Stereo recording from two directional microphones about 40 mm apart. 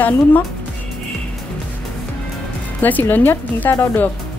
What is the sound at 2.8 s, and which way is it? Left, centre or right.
A woman's voice, left.